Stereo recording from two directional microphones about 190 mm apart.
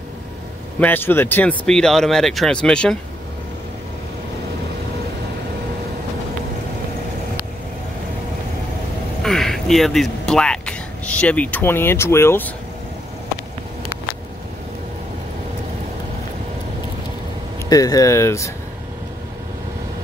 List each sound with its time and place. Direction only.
0.7 s speech: 10° left (ahead or behind)
9.2 s speech: centre (ahead or behind)
17.6 s speech: 20° left (ahead or behind)